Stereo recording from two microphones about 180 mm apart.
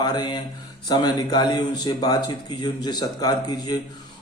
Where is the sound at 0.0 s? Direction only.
25° left (ahead or behind).